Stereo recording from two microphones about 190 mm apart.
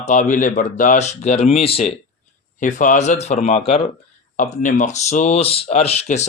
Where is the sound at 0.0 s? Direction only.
45° left (ahead or behind).